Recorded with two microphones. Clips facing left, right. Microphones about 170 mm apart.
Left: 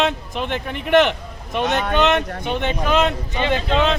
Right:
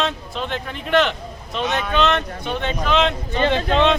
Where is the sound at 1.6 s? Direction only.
60° left (ahead or behind).